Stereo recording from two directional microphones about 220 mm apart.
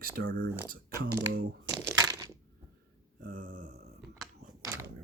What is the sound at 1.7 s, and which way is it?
Crushing, centre (ahead or behind).